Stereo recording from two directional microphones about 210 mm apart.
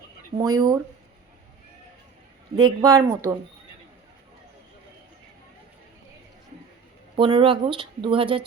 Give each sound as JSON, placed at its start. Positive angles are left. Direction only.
{"t": 0.3, "sound": "speech", "side_deg": -15}
{"t": 2.6, "sound": "speech", "side_deg": -20}
{"t": 7.2, "sound": "speech", "side_deg": -25}